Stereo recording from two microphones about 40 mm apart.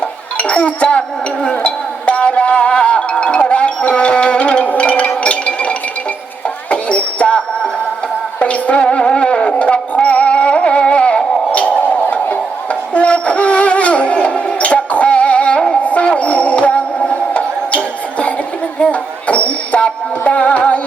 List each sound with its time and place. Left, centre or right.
0.3 s music: left
12.9 s wind instrument: left
15.8 s music: left